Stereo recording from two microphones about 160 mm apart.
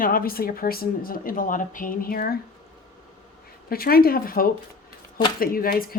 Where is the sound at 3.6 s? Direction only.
70° left (ahead or behind).